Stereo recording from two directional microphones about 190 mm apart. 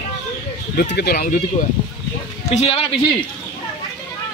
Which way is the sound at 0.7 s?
55° left (ahead or behind).